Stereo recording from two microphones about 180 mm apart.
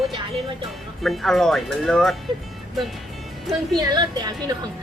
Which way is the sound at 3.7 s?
20° right (ahead or behind).